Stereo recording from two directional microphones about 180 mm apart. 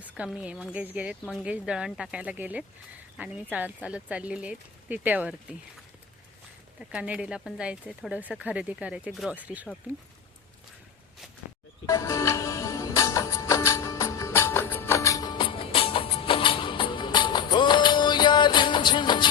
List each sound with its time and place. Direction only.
0.1 s speech: 5° right (ahead or behind)
6.7 s speech: 5° right (ahead or behind)
11.9 s music: 15° left (ahead or behind)